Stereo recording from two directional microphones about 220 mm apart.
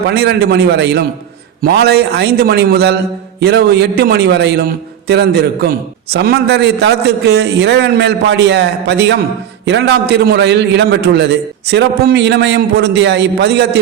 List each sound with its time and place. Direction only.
0.1 s a man's voice: 50° right (ahead or behind)